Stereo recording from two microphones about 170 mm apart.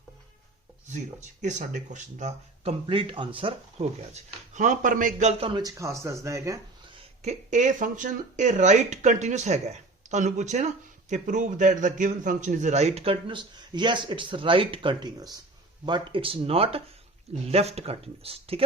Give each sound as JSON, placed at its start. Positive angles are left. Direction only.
{"t": 0.9, "sound": "speech", "side_deg": -45}
{"t": 2.8, "sound": "a man's voice", "side_deg": -30}
{"t": 5.4, "sound": "speech", "side_deg": -25}
{"t": 7.2, "sound": "a man's voice", "side_deg": -45}